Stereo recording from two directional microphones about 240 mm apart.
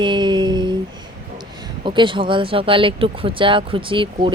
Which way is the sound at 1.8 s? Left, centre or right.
Right.